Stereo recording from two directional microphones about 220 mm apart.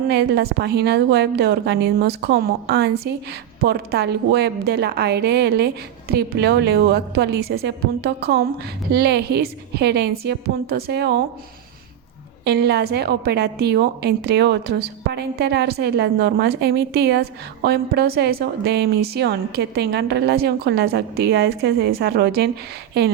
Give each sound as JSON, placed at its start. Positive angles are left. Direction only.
{"t": 0.1, "sound": "a woman's voice", "side_deg": -50}
{"t": 12.5, "sound": "a woman's voice", "side_deg": -50}